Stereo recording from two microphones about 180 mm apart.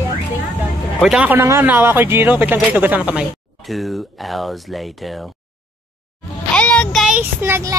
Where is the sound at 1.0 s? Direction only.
5° right (ahead or behind).